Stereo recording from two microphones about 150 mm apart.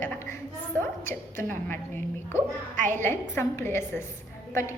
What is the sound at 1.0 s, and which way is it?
A woman's voice, 15° left (ahead or behind).